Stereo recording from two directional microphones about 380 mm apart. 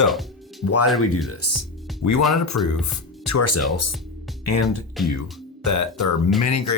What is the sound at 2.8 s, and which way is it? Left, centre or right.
Speech, left.